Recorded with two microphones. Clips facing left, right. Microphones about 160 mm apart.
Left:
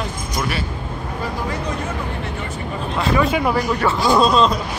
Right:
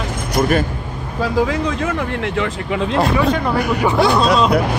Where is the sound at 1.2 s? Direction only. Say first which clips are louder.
Right 9 dB; 90° right.